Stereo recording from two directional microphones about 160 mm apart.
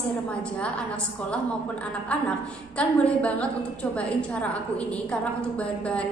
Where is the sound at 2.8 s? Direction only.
10° left (ahead or behind).